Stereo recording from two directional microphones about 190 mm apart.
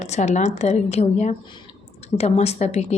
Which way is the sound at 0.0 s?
35° left (ahead or behind).